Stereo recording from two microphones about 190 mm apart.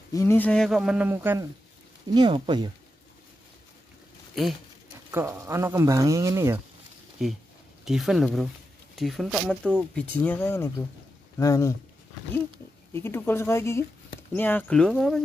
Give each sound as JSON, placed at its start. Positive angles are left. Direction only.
{"t": 0.1, "sound": "speech", "side_deg": 15}
{"t": 2.1, "sound": "speech", "side_deg": -25}
{"t": 5.1, "sound": "speech", "side_deg": -15}
{"t": 7.2, "sound": "speech", "side_deg": 0}
{"t": 12.9, "sound": "speech", "side_deg": 15}